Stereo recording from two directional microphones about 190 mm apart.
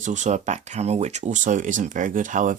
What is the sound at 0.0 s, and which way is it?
Speech, 40° right (ahead or behind).